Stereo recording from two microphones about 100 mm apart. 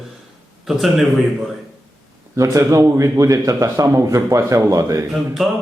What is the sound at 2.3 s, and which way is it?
A man's voice, 30° right (ahead or behind).